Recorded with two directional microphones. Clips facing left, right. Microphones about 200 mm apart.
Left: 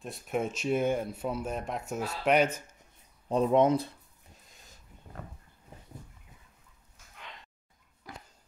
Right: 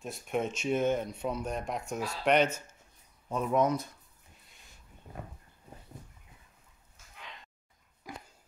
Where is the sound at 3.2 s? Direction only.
30° left (ahead or behind).